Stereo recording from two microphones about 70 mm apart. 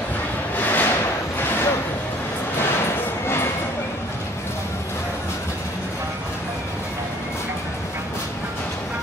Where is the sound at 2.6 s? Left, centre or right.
Left.